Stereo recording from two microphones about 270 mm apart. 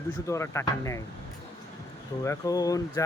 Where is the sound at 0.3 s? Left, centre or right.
Centre.